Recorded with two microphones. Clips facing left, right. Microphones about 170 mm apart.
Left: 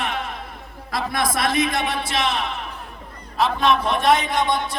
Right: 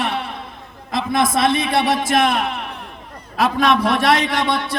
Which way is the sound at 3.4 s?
85° right.